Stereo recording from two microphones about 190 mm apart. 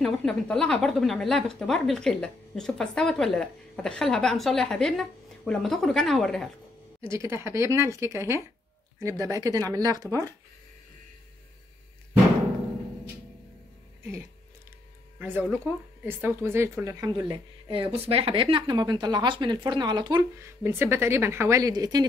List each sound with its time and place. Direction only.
0.0 s speech: 5° left (ahead or behind)
7.0 s a woman's voice: 15° right (ahead or behind)
15.1 s speech: 10° right (ahead or behind)